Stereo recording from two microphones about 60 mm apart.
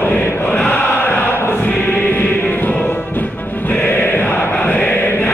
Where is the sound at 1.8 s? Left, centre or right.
Left.